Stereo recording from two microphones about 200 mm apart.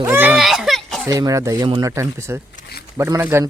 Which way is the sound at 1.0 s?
15° right (ahead or behind).